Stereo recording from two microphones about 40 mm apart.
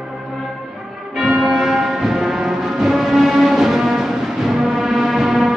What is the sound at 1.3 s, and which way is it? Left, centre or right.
Music, centre.